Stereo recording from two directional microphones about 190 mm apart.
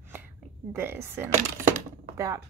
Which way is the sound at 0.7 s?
10° right (ahead or behind).